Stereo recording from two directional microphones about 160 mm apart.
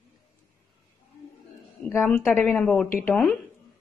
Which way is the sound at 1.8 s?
10° left (ahead or behind).